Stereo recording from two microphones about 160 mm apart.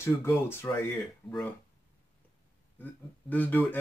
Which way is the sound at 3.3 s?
10° left (ahead or behind).